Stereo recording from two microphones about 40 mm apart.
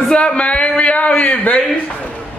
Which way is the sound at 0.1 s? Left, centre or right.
Left.